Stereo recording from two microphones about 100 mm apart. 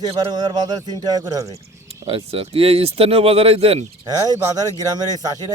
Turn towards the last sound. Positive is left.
turn(degrees=-40)  # may be behind; listen again after turning